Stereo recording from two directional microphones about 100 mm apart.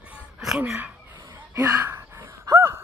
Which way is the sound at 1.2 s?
40° right (ahead or behind).